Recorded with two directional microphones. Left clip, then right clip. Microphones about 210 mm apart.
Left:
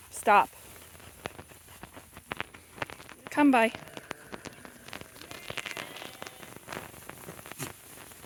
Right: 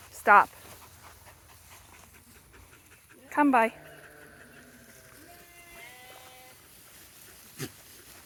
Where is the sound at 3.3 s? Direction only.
40° left (ahead or behind).